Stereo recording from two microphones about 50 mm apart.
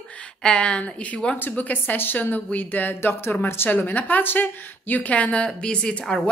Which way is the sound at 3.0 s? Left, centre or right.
Left.